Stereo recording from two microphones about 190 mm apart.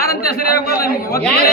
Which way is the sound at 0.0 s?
50° left (ahead or behind).